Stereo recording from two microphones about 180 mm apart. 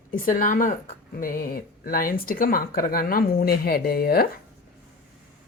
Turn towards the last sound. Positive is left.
turn(degrees=60)  # may be behind; listen again after turning